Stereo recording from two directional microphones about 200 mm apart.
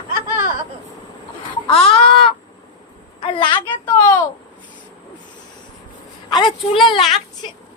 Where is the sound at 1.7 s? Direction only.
30° left (ahead or behind).